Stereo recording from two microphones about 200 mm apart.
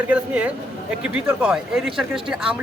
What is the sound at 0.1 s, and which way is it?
Speech, 5° right (ahead or behind).